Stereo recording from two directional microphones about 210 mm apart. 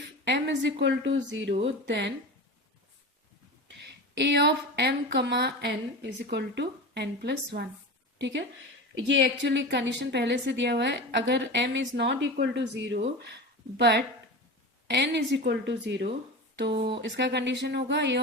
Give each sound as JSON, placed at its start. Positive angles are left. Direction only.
{"t": 0.3, "sound": "a woman's voice", "side_deg": -55}
{"t": 3.8, "sound": "a woman's voice", "side_deg": -55}